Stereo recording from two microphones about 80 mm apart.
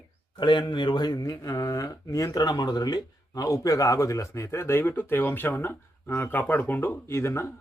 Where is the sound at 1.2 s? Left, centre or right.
Left.